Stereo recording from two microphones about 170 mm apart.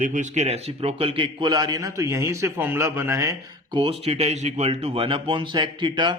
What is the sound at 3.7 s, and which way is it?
Speech, 35° right (ahead or behind).